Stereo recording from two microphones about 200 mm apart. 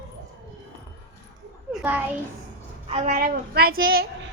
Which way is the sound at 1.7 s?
5° left (ahead or behind).